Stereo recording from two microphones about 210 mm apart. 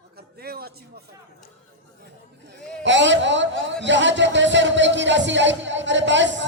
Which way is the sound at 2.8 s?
60° right (ahead or behind).